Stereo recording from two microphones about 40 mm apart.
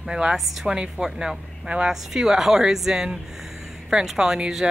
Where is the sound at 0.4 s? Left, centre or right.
Centre.